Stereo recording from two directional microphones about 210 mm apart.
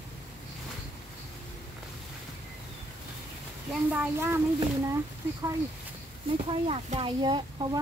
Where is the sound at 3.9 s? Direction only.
10° right (ahead or behind).